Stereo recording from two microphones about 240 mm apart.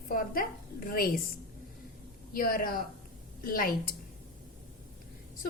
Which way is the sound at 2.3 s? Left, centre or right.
Left.